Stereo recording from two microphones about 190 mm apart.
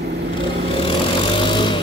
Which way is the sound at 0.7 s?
25° left (ahead or behind).